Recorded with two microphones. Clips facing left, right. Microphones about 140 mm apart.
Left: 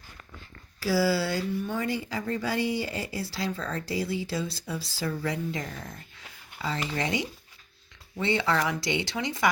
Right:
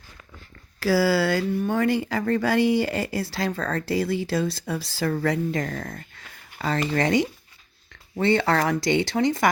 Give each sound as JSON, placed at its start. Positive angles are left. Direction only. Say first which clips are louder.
{"t": 0.8, "sound": "speech", "louder": "right 5 dB", "side_deg": -65}